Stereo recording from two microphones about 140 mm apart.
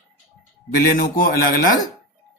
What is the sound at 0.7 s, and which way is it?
A man's voice, 90° left.